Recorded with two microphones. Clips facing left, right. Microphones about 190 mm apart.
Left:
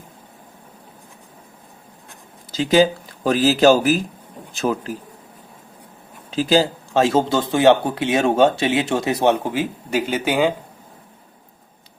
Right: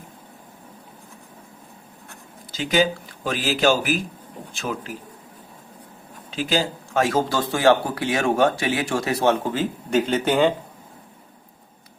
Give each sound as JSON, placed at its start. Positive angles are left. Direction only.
{"t": 2.5, "sound": "speech", "side_deg": 35}
{"t": 6.3, "sound": "speech", "side_deg": 35}